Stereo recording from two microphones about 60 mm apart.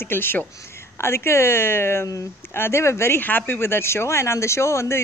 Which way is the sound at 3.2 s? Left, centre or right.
Left.